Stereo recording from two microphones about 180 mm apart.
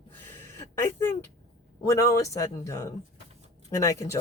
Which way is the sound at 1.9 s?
15° left (ahead or behind).